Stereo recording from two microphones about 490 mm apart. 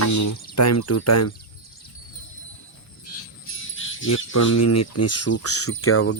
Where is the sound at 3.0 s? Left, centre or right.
Left.